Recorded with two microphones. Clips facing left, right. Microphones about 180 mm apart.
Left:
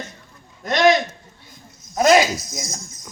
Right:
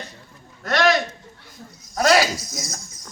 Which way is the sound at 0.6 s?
20° left (ahead or behind).